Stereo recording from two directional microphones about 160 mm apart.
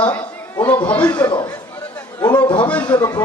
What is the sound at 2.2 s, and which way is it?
Speech, 25° left (ahead or behind).